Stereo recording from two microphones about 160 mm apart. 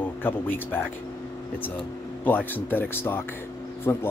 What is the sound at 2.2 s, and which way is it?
Speech, 10° left (ahead or behind).